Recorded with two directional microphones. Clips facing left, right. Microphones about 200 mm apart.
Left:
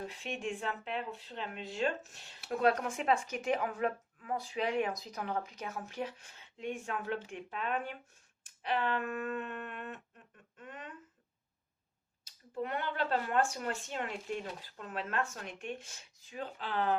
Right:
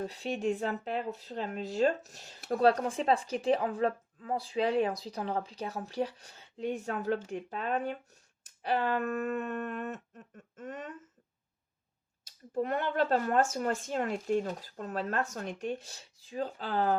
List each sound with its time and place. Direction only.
0.0 s speech: 35° right (ahead or behind)
8.4 s a sound: 40° right (ahead or behind)
12.5 s speech: 45° right (ahead or behind)